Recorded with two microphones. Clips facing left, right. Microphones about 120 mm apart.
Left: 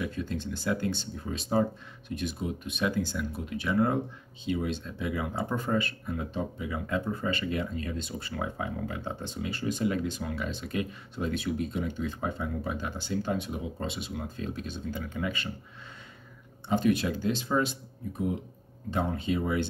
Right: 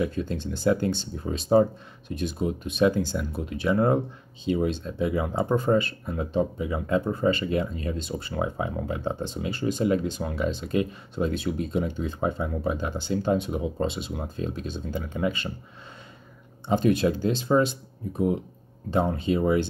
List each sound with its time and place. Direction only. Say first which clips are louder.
0.0 s speech: right 5 dB; 30° right (ahead or behind)
16.6 s speech: right 4 dB; 30° right (ahead or behind)